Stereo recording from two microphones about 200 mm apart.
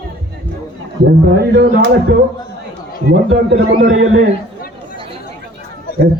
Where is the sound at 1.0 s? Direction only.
55° right (ahead or behind).